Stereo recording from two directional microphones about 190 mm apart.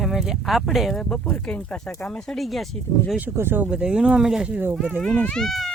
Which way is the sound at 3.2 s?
10° right (ahead or behind).